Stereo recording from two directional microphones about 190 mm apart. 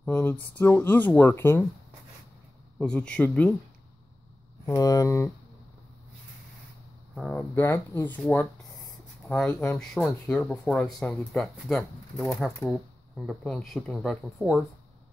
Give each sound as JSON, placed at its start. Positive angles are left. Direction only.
{"t": 0.0, "sound": "speech", "side_deg": 10}
{"t": 2.8, "sound": "speech", "side_deg": 5}
{"t": 4.6, "sound": "speech", "side_deg": 15}
{"t": 7.2, "sound": "speech", "side_deg": 5}
{"t": 9.3, "sound": "speech", "side_deg": 10}